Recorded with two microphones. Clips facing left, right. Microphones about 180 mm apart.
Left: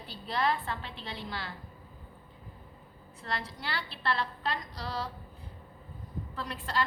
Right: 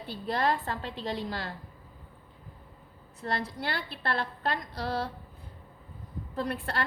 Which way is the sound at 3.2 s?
45° right (ahead or behind).